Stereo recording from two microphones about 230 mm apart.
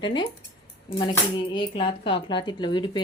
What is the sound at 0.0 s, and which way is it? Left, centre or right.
Speech, left.